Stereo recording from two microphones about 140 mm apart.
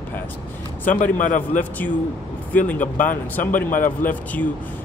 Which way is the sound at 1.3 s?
65° left (ahead or behind).